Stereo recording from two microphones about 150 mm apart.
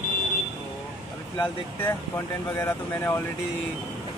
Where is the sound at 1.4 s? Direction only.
15° left (ahead or behind).